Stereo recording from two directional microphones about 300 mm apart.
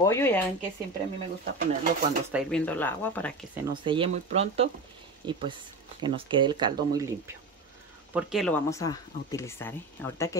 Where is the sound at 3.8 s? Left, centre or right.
Centre.